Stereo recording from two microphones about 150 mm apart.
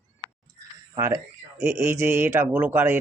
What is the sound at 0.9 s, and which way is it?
Speech, 20° right (ahead or behind).